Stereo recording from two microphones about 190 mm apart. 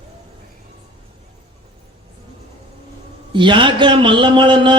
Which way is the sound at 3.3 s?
25° right (ahead or behind).